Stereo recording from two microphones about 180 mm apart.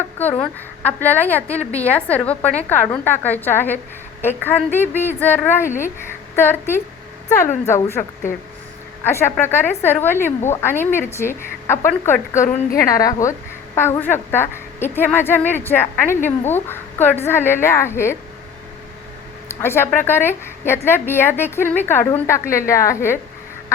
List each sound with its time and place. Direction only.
0.2 s a woman's voice: 10° left (ahead or behind)
19.5 s a woman's voice: 15° left (ahead or behind)